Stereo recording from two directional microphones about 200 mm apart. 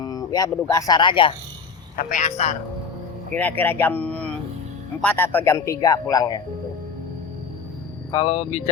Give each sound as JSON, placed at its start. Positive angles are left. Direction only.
{"t": 0.0, "sound": "a sound", "side_deg": 20}
{"t": 0.7, "sound": "speech", "side_deg": 20}
{"t": 2.0, "sound": "a man's voice", "side_deg": 40}
{"t": 3.3, "sound": "a man's voice", "side_deg": 10}
{"t": 8.1, "sound": "speech", "side_deg": 30}